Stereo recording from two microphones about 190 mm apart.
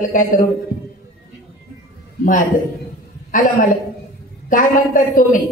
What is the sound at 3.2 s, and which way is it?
A man's voice, 45° left (ahead or behind).